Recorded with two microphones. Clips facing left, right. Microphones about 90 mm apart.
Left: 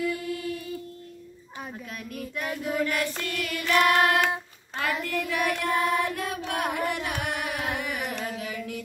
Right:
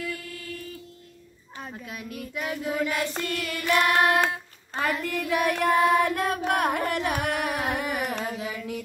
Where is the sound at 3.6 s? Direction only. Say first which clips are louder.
Left 1 dB; 15° right (ahead or behind).